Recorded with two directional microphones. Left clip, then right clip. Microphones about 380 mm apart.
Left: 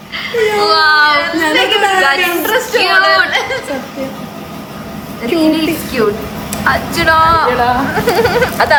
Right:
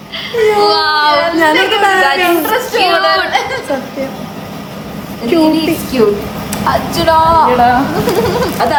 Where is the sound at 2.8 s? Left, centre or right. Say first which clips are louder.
Left 1 dB; centre.